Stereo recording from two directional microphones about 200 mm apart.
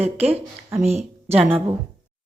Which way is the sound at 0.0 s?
30° right (ahead or behind).